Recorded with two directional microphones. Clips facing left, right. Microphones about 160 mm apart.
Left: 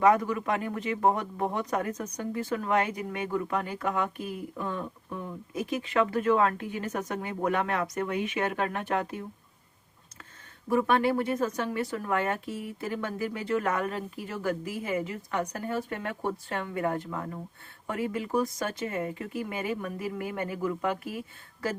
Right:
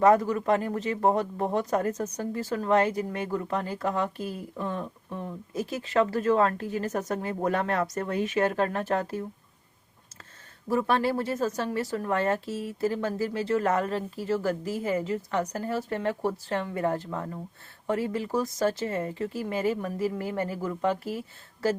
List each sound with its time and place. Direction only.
0.1 s speech: 40° right (ahead or behind)
10.7 s speech: 30° right (ahead or behind)